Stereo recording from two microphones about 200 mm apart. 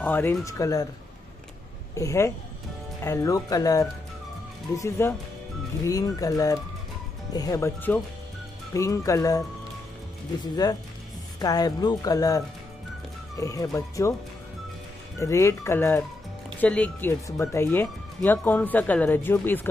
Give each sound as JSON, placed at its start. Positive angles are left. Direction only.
{"t": 0.0, "sound": "speech", "side_deg": 10}
{"t": 2.0, "sound": "speech", "side_deg": 15}
{"t": 10.4, "sound": "speech", "side_deg": 20}
{"t": 15.1, "sound": "speech", "side_deg": 15}